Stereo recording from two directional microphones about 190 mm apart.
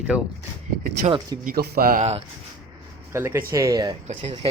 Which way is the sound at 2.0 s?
35° right (ahead or behind).